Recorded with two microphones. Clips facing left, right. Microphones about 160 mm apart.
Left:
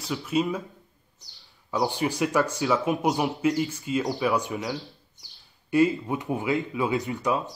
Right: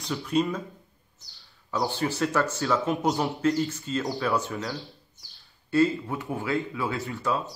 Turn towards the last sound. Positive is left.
turn(degrees=15)  # may be behind; listen again after turning